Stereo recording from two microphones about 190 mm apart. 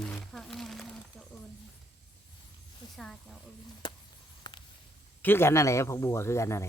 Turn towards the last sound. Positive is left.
turn(degrees=15)  # may be behind; listen again after turning